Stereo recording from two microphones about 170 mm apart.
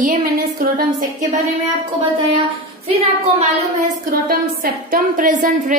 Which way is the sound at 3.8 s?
60° right (ahead or behind).